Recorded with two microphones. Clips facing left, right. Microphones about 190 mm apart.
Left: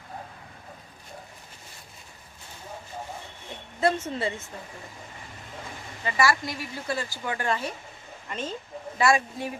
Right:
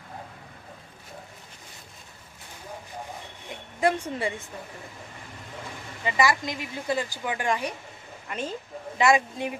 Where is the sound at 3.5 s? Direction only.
15° right (ahead or behind).